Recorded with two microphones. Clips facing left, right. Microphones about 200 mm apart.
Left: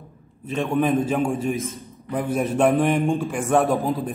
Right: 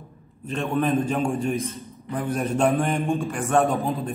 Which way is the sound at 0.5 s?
10° left (ahead or behind).